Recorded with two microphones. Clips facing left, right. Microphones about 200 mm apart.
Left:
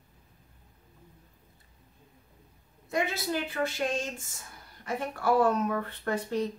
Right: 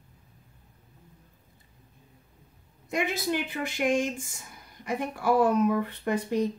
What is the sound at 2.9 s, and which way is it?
Speech, 15° right (ahead or behind).